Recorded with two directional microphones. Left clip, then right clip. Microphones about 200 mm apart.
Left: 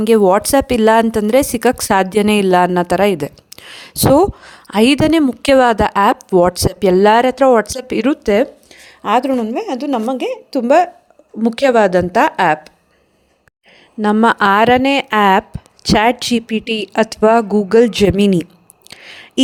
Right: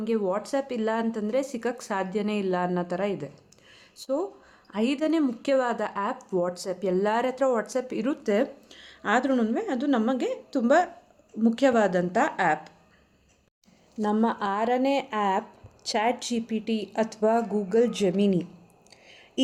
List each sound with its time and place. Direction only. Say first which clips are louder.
0.0 s speech: left 16 dB; 55° left (ahead or behind); by 8.4 s 40° left (ahead or behind)
8.7 s a sound: left 10 dB; 30° left (ahead or behind)
9.3 s a woman's voice: left 8 dB; 20° left (ahead or behind)
10.5 s a woman's voice: left 11 dB; 35° left (ahead or behind)
14.0 s speech: left 14 dB; 50° left (ahead or behind)
18.9 s a sound: left 17 dB; 50° left (ahead or behind)